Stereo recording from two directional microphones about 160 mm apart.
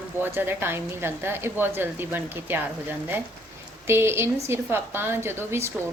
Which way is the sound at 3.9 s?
15° right (ahead or behind).